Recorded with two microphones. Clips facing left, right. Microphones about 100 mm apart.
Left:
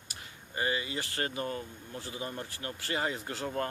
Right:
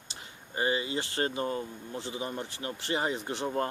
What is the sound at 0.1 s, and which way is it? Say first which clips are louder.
Speech: right 2 dB; 25° right (ahead or behind).